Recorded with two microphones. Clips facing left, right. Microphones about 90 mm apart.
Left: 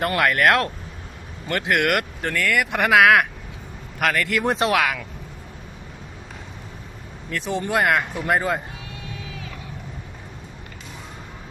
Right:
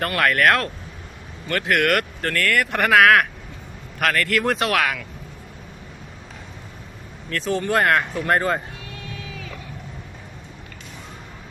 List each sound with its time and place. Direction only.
0.0 s speech: 20° left (ahead or behind)
7.3 s speech: 15° left (ahead or behind)